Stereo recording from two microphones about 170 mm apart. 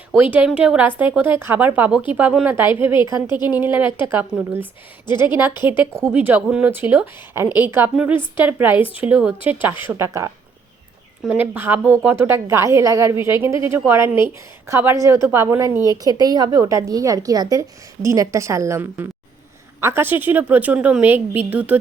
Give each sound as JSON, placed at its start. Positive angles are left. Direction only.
{"t": 0.2, "sound": "a woman's voice", "side_deg": -10}
{"t": 5.6, "sound": "a woman's voice", "side_deg": -15}
{"t": 8.8, "sound": "speech", "side_deg": 35}
{"t": 9.0, "sound": "a woman's voice", "side_deg": -5}